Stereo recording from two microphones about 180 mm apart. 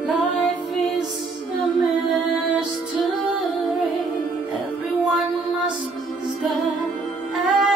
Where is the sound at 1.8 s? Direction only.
Centre (ahead or behind).